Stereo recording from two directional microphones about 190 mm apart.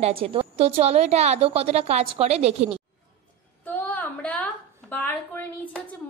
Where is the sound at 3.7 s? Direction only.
10° left (ahead or behind).